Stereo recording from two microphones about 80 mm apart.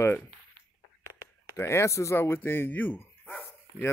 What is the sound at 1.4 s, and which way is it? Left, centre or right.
Speech, left.